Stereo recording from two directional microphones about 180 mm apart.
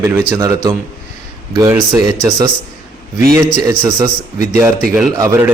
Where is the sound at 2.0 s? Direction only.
20° right (ahead or behind).